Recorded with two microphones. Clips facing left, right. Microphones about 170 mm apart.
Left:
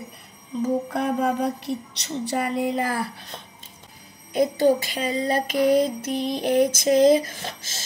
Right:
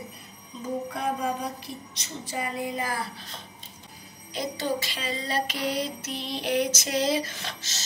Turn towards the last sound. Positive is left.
turn(degrees=45)  # may be behind; listen again after turning